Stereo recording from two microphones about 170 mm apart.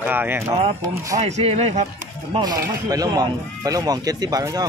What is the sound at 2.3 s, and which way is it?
Speech, 20° right (ahead or behind).